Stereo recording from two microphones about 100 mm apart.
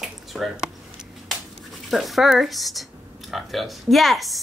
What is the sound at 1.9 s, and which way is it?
Speech, centre (ahead or behind).